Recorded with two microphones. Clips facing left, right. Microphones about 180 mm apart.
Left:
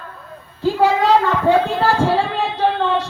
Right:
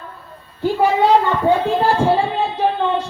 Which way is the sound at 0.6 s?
90° left.